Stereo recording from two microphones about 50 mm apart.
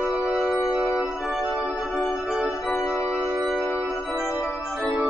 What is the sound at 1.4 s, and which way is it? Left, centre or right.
Music, right.